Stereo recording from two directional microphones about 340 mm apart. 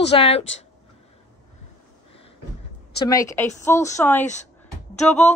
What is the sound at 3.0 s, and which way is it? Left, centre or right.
Speech, centre.